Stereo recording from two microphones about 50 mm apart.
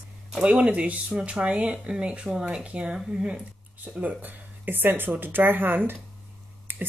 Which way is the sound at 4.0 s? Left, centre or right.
Right.